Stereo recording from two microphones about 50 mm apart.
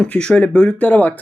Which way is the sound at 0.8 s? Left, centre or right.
Left.